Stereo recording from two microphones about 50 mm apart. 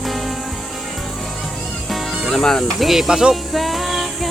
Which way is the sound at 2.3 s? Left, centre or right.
Centre.